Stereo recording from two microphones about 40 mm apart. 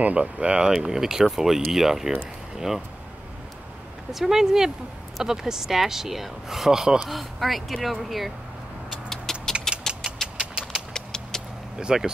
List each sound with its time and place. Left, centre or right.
0.0 s speech: right
0.7 s speech: centre
4.1 s speech: centre
7.1 s speech: centre
9.1 s vehicle: centre
9.7 s gears: centre
10.2 s vehicle: centre
10.9 s clip-clop: centre
11.9 s speech: centre